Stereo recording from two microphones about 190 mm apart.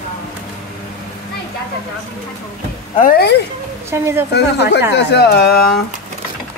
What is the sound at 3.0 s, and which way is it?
Speech, 50° left (ahead or behind).